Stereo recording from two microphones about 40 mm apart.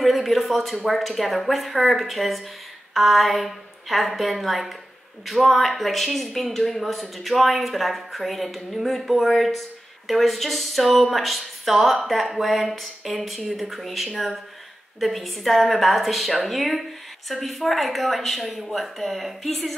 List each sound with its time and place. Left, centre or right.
0.0 s speech: centre